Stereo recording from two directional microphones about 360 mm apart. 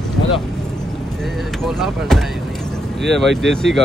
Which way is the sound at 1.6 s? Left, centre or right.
Centre.